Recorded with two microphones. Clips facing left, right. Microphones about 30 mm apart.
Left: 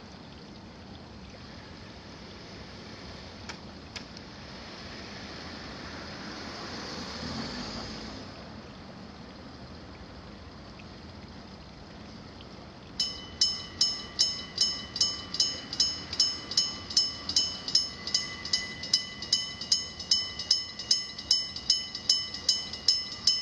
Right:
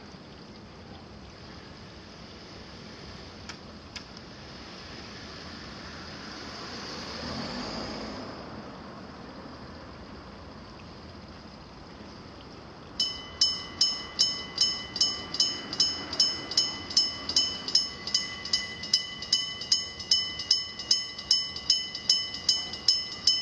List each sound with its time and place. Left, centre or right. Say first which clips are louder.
5.5 s vehicle: left 1 dB; centre
12.9 s train: right 2 dB; centre